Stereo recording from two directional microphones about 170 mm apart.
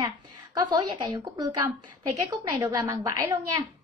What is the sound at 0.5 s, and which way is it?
Speech, 30° right (ahead or behind).